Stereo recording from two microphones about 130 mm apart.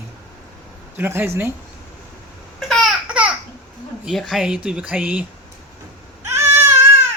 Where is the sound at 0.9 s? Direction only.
15° right (ahead or behind).